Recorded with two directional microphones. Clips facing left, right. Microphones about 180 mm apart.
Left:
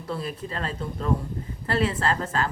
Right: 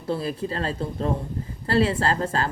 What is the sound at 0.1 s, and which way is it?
A woman's voice, 30° right (ahead or behind).